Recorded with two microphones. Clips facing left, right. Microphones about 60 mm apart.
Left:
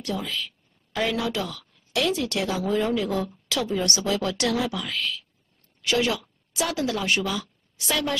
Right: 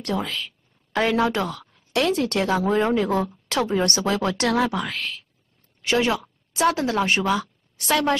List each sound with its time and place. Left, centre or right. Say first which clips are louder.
0.0 s a woman's voice: right 3 dB; right
5.8 s a woman's voice: right 3 dB; right